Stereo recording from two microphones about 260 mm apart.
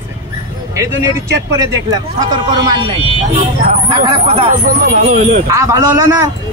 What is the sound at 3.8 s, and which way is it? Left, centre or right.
Speech, centre.